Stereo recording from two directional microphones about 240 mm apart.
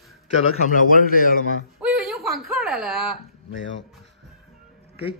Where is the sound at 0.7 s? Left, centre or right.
Left.